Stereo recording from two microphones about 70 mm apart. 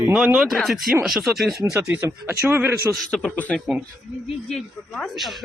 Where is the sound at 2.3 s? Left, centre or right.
Right.